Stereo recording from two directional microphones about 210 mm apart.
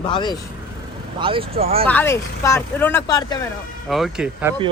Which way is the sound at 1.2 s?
25° right (ahead or behind).